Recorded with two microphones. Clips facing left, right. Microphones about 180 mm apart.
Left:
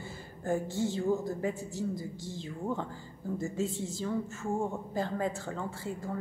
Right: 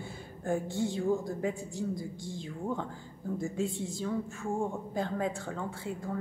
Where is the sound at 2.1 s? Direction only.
55° right (ahead or behind).